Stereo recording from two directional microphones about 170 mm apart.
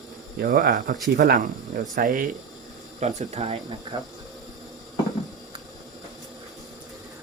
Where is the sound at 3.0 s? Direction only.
45° right (ahead or behind).